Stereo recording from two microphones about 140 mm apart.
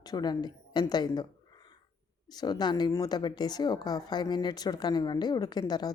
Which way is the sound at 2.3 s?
30° left (ahead or behind).